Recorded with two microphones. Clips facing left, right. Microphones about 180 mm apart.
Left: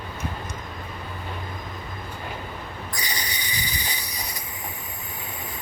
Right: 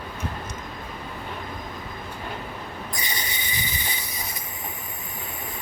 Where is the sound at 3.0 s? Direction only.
25° right (ahead or behind).